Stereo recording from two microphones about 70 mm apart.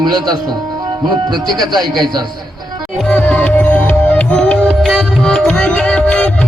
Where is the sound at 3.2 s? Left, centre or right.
Left.